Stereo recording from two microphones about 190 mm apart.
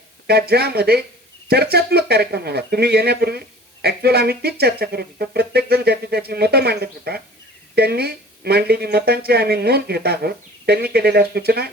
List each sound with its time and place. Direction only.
0.3 s speech: 55° right (ahead or behind)